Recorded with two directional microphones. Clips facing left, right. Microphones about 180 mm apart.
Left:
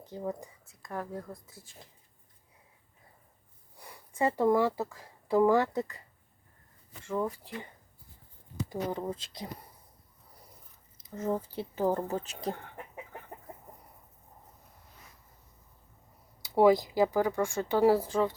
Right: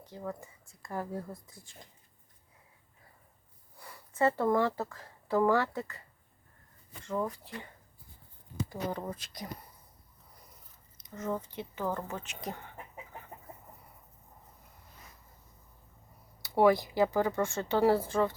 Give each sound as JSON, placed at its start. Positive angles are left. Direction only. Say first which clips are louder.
{"t": 0.1, "sound": "speech", "louder": "left 4 dB", "side_deg": 20}
{"t": 0.6, "sound": "speech", "louder": "right 4 dB", "side_deg": 0}
{"t": 3.8, "sound": "speech", "louder": "right 1 dB", "side_deg": 15}
{"t": 7.1, "sound": "speech", "louder": "left 2 dB", "side_deg": 10}
{"t": 8.7, "sound": "speech", "louder": "left 4 dB", "side_deg": 20}
{"t": 11.1, "sound": "speech", "louder": "left 3 dB", "side_deg": 30}
{"t": 16.4, "sound": "speech", "louder": "left 2 dB", "side_deg": 15}